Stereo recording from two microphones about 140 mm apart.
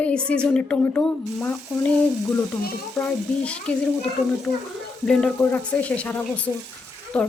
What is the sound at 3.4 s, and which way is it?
Speech, 10° left (ahead or behind).